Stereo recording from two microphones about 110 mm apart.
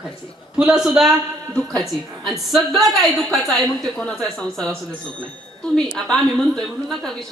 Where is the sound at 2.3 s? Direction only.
Centre (ahead or behind).